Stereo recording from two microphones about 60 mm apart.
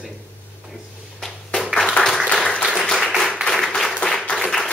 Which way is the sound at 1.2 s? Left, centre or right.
Centre.